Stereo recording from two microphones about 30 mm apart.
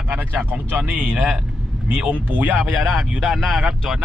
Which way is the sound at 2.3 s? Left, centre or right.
Right.